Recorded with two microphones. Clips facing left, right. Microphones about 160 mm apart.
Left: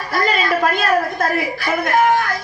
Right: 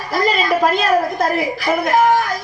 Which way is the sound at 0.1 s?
20° right (ahead or behind).